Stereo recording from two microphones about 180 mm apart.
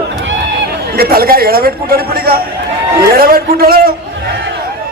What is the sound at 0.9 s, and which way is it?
A man's voice, 55° right (ahead or behind).